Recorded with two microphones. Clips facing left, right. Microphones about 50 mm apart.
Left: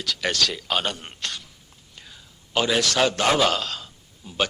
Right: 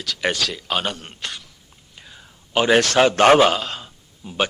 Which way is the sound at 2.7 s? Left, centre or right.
Right.